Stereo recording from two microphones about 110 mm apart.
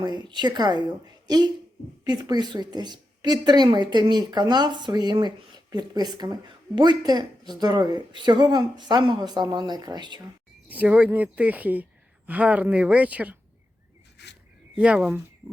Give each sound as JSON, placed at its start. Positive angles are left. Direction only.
{"t": 0.0, "sound": "speech", "side_deg": -40}
{"t": 10.7, "sound": "a woman's voice", "side_deg": -15}
{"t": 14.8, "sound": "a woman's voice", "side_deg": -10}